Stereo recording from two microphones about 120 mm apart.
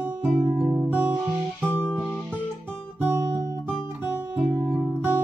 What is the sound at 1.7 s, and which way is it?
Music, 10° left (ahead or behind).